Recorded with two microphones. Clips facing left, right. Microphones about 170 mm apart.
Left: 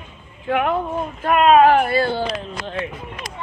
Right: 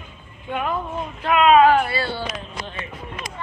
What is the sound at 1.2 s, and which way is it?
Speech, 45° left (ahead or behind).